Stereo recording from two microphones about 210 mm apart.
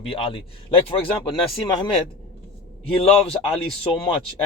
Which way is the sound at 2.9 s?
30° left (ahead or behind).